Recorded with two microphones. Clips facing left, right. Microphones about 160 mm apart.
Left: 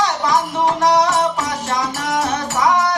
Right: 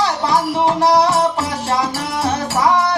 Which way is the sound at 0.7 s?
30° right (ahead or behind).